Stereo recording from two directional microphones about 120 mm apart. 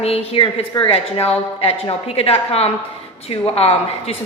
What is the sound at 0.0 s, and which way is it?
A woman's voice, 55° left (ahead or behind).